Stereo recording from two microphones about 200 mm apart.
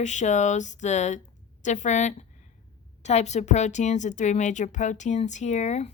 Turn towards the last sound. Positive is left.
turn(degrees=35)  # may be behind; listen again after turning